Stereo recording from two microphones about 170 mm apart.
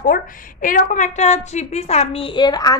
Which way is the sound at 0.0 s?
50° left (ahead or behind).